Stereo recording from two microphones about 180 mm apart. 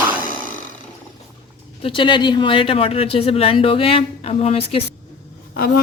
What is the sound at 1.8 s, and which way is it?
Speech, 30° left (ahead or behind).